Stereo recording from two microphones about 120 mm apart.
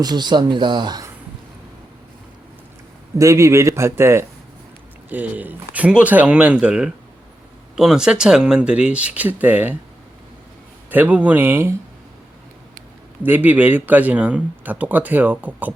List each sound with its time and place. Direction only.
0.0 s speech: 35° right (ahead or behind)
3.2 s a man's voice: 25° right (ahead or behind)
10.9 s speech: 15° right (ahead or behind)
13.2 s speech: 15° right (ahead or behind)